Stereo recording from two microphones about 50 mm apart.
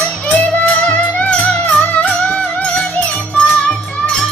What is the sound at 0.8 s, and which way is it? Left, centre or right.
Music, left.